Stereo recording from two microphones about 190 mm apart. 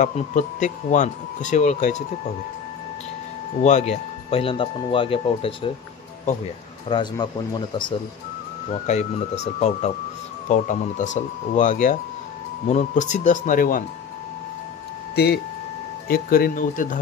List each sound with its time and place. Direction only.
0.0 s speech: 40° left (ahead or behind)
3.6 s speech: 35° left (ahead or behind)
6.9 s speech: 25° left (ahead or behind)
8.8 s speech: 35° left (ahead or behind)
15.1 s speech: 60° left (ahead or behind)